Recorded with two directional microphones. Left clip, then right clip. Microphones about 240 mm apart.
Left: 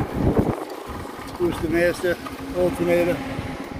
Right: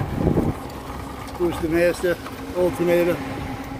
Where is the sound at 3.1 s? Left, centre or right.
Right.